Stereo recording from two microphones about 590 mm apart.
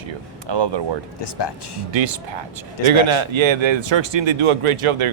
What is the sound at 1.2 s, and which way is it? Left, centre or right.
Speech, left.